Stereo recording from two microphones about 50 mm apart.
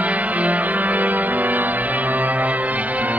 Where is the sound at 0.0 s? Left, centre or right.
Right.